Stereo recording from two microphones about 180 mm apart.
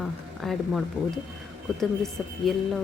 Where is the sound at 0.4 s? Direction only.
Centre (ahead or behind).